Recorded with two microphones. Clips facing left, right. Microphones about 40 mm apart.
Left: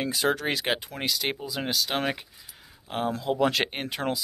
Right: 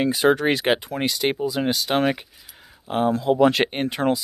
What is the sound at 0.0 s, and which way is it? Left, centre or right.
Speech, right.